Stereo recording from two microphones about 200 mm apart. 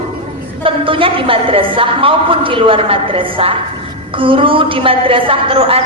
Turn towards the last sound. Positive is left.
turn(degrees=-25)  # may be behind; listen again after turning